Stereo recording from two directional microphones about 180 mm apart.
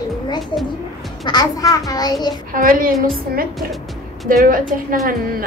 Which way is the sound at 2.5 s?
50° right (ahead or behind).